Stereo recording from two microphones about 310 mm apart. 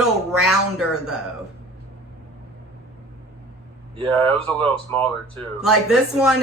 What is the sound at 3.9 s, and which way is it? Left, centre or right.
Speech, centre.